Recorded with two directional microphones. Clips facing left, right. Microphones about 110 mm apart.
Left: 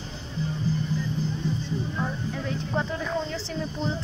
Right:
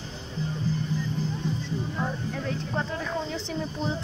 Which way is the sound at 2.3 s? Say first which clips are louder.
Left 1 dB; centre (ahead or behind).